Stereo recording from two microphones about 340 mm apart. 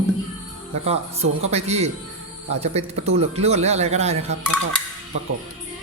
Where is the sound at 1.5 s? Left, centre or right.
Centre.